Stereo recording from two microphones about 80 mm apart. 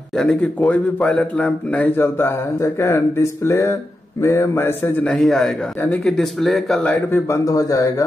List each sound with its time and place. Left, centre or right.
0.1 s speech: centre
2.0 s speech: left
4.2 s mantra: left
5.0 s speech: centre
7.1 s speech: left